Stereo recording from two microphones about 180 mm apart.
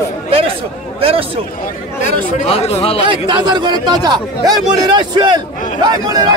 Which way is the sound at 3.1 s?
25° right (ahead or behind).